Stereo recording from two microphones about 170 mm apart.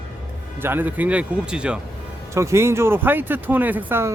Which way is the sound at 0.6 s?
10° right (ahead or behind).